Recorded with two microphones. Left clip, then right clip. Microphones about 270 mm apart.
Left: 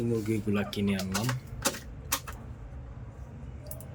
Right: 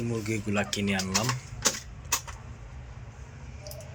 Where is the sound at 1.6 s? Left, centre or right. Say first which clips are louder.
Right 3 dB; left.